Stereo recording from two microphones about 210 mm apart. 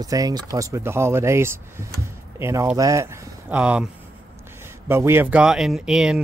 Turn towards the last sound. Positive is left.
turn(degrees=-5)  # may be behind; listen again after turning